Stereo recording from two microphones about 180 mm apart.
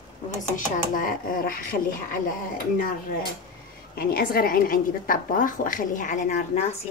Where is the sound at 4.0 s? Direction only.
55° left (ahead or behind).